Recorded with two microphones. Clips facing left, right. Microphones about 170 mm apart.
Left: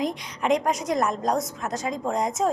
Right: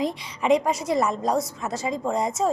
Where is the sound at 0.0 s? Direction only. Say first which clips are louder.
Right 1 dB; centre (ahead or behind).